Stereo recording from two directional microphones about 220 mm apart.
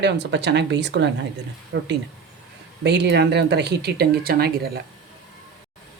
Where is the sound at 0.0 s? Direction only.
50° right (ahead or behind).